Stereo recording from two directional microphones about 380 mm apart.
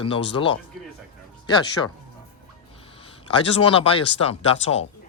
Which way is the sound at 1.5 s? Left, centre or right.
Centre.